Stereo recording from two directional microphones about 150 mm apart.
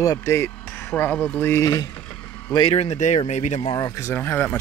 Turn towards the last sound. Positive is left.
turn(degrees=15)  # may be behind; listen again after turning